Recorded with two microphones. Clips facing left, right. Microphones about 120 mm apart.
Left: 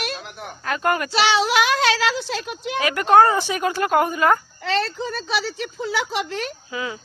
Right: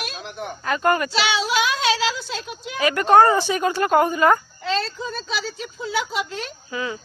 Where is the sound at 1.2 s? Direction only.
65° left (ahead or behind).